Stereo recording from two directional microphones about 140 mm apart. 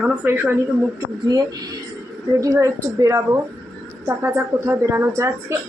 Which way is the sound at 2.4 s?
25° right (ahead or behind).